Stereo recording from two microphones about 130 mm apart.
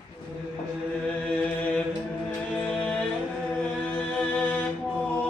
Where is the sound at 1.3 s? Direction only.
10° left (ahead or behind).